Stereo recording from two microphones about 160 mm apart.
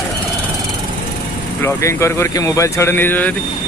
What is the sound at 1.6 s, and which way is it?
Speech, 15° left (ahead or behind).